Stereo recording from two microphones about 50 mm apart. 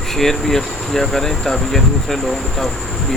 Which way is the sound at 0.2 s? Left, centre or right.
Centre.